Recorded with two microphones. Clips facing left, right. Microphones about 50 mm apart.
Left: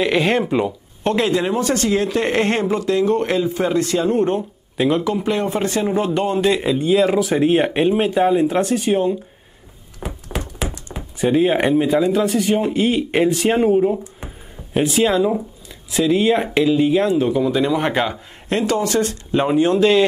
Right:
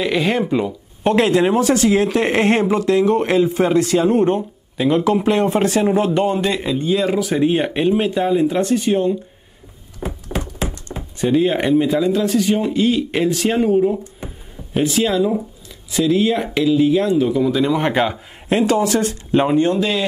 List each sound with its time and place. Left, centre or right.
0.0 s speech: centre
1.1 s speech: right; by 6.4 s centre
6.4 s speech: centre
11.1 s speech: centre
14.7 s speech: centre
15.0 s speech: left
17.4 s speech: centre
19.6 s speech: left